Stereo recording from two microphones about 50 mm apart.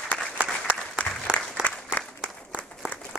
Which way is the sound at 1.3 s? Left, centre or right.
Centre.